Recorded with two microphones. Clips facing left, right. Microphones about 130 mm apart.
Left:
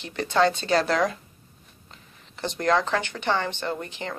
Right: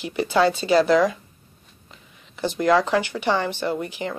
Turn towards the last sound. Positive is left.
turn(degrees=-10)  # may be behind; listen again after turning